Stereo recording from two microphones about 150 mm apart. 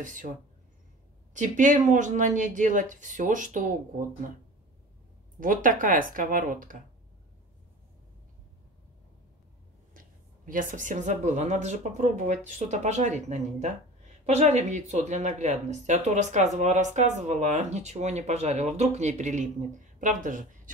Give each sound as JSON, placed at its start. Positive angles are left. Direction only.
{"t": 0.0, "sound": "speech", "side_deg": -60}
{"t": 1.3, "sound": "speech", "side_deg": -60}
{"t": 5.4, "sound": "speech", "side_deg": -65}
{"t": 9.9, "sound": "speech", "side_deg": -65}